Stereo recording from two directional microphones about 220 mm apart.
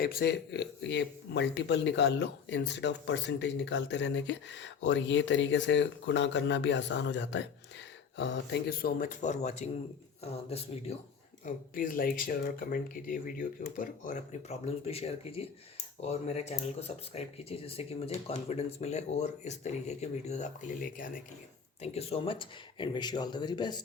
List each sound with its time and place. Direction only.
0.0 s a man's voice: 45° left (ahead or behind); by 10.9 s 25° left (ahead or behind)
11.4 s speech: 40° left (ahead or behind); by 23.8 s 20° left (ahead or behind)